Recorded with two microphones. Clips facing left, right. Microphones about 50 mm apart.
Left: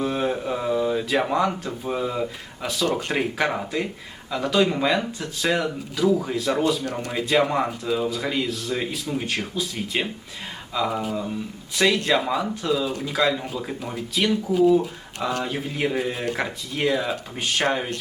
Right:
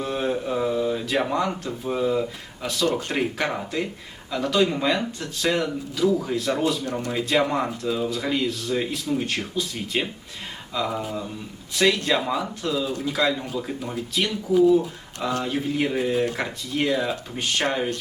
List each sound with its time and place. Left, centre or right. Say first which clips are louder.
0.0 s a sound: left 1 dB; centre
1.6 s speech: right 2 dB; centre
8.1 s speech: right 1 dB; centre
15.4 s speech: right 1 dB; centre
16.1 s speech: right 4 dB; left
16.4 s speech: left 1 dB; centre